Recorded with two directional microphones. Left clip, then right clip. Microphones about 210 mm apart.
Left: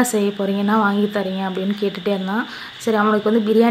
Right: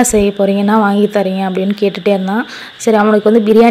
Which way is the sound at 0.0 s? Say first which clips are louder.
Right 8 dB; 25° right (ahead or behind).